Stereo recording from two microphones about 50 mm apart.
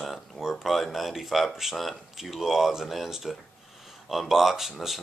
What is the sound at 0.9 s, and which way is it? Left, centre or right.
Speech, centre.